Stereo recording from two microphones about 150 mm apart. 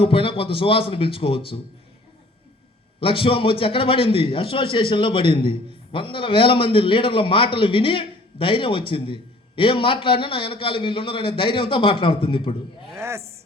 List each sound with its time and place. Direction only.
0.0 s a man's voice: 35° left (ahead or behind)
3.0 s a man's voice: 35° left (ahead or behind)
12.9 s a sound: 15° right (ahead or behind)